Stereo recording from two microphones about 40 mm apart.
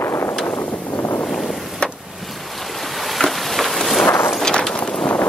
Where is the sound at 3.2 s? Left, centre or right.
Centre.